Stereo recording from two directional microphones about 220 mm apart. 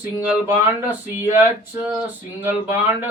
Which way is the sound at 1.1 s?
10° right (ahead or behind).